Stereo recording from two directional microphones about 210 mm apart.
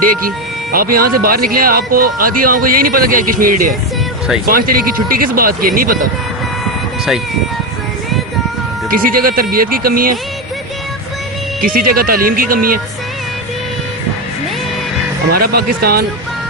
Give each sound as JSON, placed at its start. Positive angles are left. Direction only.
{"t": 0.0, "sound": "speech", "side_deg": -45}
{"t": 8.9, "sound": "speech", "side_deg": -45}
{"t": 11.6, "sound": "speech", "side_deg": -45}
{"t": 15.3, "sound": "speech", "side_deg": -45}